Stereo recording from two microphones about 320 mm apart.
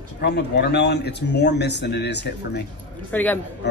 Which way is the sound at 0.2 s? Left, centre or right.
Left.